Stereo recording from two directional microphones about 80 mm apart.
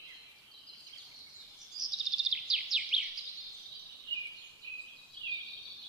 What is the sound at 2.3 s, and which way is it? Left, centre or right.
Bird vocalization, centre.